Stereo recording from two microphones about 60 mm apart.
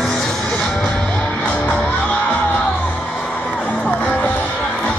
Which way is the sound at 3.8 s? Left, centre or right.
Left.